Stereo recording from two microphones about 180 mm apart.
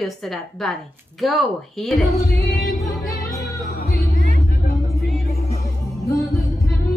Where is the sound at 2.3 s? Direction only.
15° left (ahead or behind).